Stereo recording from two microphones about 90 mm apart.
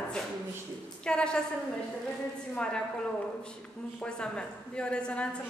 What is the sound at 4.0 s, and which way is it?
A woman's voice, 10° left (ahead or behind).